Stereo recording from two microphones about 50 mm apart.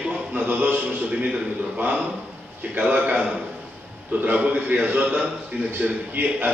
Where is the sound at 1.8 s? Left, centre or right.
Right.